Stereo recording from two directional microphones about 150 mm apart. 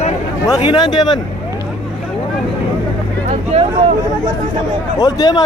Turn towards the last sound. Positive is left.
turn(degrees=25)  # may be behind; listen again after turning